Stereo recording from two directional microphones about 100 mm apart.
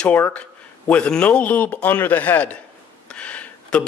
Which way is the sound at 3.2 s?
10° left (ahead or behind).